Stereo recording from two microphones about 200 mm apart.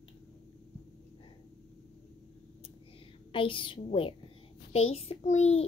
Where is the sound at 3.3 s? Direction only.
25° left (ahead or behind).